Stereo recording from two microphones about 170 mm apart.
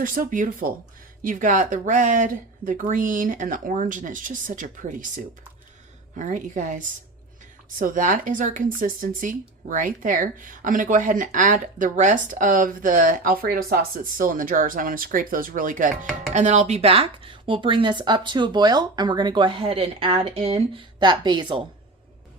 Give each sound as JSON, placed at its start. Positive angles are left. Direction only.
{"t": 0.0, "sound": "speech", "side_deg": -55}